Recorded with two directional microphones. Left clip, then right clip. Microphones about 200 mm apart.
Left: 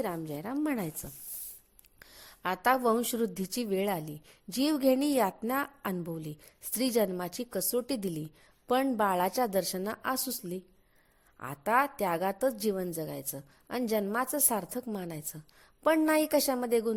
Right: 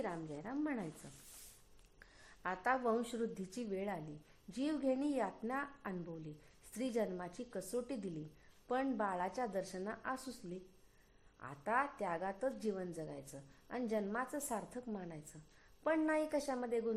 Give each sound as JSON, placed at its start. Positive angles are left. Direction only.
{"t": 0.0, "sound": "a woman's voice", "side_deg": 40}
{"t": 2.0, "sound": "a woman's voice", "side_deg": 35}